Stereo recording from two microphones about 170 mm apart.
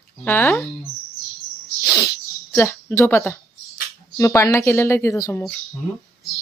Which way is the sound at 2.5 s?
15° left (ahead or behind).